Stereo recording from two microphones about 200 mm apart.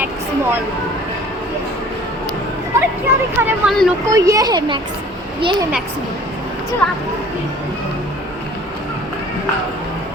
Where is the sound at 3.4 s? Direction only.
5° right (ahead or behind).